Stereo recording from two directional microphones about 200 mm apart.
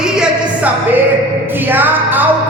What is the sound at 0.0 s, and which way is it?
Music, 5° right (ahead or behind).